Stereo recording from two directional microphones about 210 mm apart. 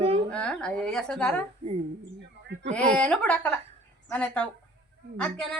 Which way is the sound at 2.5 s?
55° right (ahead or behind).